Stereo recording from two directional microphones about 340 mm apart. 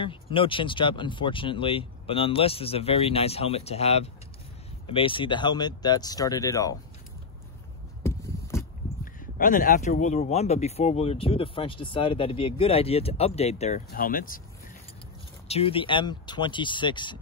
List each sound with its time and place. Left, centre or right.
0.0 s speech: centre
8.0 s a sound: centre
9.0 s speech: left
15.4 s speech: centre